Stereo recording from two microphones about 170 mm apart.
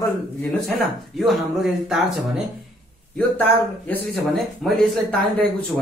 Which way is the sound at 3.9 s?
Centre (ahead or behind).